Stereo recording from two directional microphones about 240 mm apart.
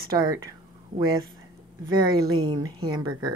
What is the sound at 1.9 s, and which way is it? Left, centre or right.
Speech, centre.